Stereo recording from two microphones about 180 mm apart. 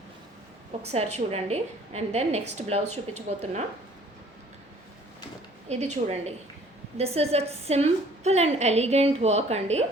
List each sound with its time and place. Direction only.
0.8 s a woman's voice: 35° right (ahead or behind)
5.6 s a woman's voice: 35° right (ahead or behind)